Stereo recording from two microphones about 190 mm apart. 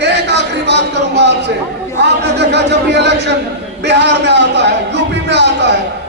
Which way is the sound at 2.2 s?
65° right (ahead or behind).